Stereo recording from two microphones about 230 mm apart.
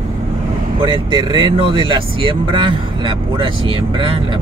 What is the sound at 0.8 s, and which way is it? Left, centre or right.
Speech, centre.